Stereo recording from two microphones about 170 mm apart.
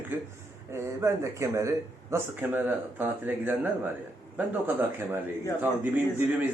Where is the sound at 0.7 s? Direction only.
15° right (ahead or behind).